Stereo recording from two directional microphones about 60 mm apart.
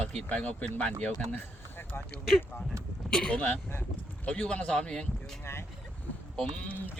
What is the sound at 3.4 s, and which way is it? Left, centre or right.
Speech, left.